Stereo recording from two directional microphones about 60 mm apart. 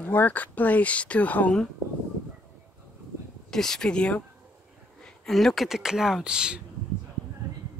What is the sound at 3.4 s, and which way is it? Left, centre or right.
Speech, centre.